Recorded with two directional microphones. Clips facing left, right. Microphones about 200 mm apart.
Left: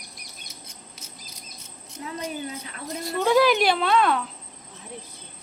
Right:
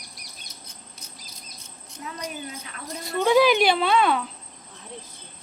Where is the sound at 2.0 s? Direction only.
25° left (ahead or behind).